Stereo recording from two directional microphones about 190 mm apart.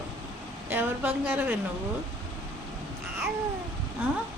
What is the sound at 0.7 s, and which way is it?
Speech, 10° right (ahead or behind).